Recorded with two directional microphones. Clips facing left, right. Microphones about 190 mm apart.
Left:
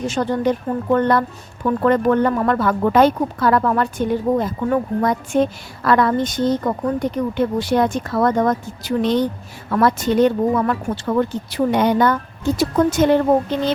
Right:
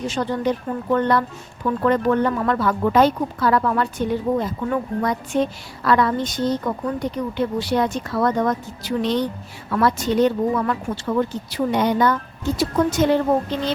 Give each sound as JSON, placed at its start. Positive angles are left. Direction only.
{"t": 0.1, "sound": "speech", "side_deg": 45}